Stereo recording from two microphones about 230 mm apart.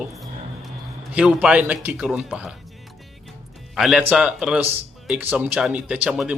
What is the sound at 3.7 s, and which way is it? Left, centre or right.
Speech, centre.